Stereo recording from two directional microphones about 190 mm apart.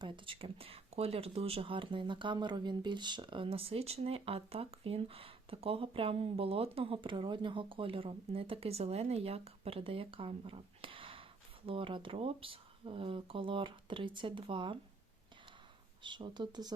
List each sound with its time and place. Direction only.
0.0 s speech: 30° right (ahead or behind)
16.0 s speech: 25° right (ahead or behind)